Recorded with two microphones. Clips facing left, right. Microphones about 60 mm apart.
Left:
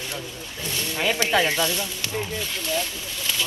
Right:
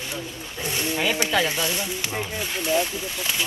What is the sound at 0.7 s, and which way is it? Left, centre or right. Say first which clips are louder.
Speech: right 3 dB; right.